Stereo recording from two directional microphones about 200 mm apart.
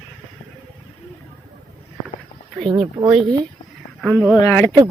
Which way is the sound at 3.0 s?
15° right (ahead or behind).